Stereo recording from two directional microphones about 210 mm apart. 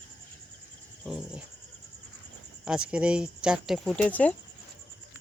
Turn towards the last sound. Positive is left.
turn(degrees=5)  # may be behind; listen again after turning